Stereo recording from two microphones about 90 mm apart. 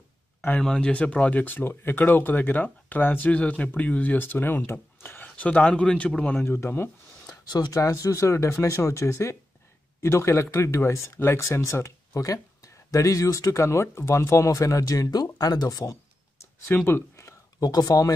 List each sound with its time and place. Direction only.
0.6 s speech: 10° left (ahead or behind)
6.4 s speech: 25° left (ahead or behind)
7.2 s speech: 50° left (ahead or behind)
15.9 s a sound: 30° left (ahead or behind)
16.7 s speech: 25° left (ahead or behind)
17.6 s speech: 45° left (ahead or behind)